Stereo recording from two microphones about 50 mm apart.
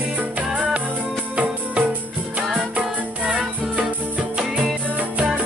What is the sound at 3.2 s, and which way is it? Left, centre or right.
Music, centre.